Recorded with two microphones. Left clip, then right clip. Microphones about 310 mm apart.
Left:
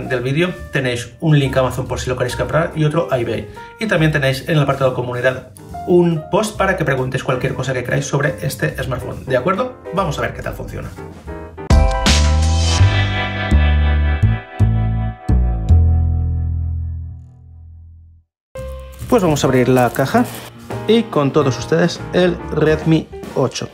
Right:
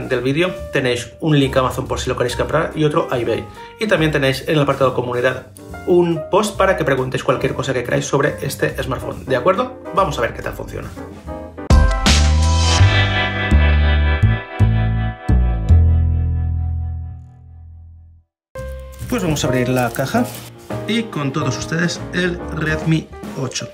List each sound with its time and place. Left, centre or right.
0.1 s speech: centre
11.6 s music: centre
19.1 s speech: centre